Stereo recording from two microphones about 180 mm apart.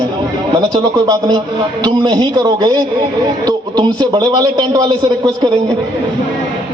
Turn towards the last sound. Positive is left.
turn(degrees=-20)  # may be behind; listen again after turning